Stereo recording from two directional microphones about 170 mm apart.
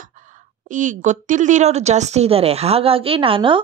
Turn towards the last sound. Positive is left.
turn(degrees=-30)  # may be behind; listen again after turning